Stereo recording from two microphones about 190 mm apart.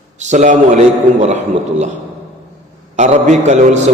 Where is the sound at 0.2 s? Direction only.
40° right (ahead or behind).